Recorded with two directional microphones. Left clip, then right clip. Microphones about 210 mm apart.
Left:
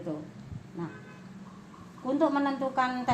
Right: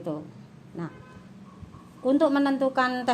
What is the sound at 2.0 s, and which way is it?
Speech, 55° right (ahead or behind).